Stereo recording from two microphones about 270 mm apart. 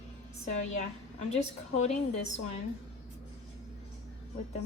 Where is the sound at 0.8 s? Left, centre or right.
Left.